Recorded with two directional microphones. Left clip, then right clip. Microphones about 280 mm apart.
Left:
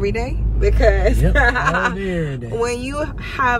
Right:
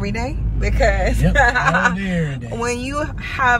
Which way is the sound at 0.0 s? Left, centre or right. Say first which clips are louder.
Left 3 dB; centre.